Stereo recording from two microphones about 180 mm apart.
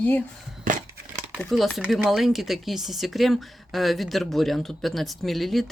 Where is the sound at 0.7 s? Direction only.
45° right (ahead or behind).